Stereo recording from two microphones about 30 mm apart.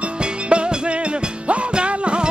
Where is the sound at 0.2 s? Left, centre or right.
Right.